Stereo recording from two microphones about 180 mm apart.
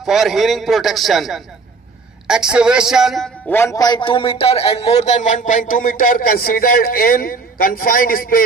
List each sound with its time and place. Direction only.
0.0 s a man's voice: centre (ahead or behind)
3.4 s a man's voice: 15° left (ahead or behind); by 8.5 s 55° left (ahead or behind)